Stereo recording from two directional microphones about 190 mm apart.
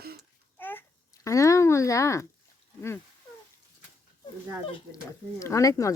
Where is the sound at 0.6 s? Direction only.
10° left (ahead or behind).